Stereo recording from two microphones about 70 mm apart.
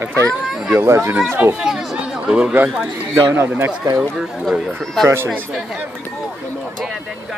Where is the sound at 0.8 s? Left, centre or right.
Right.